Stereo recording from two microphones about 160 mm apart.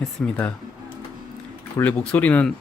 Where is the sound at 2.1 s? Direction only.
10° left (ahead or behind).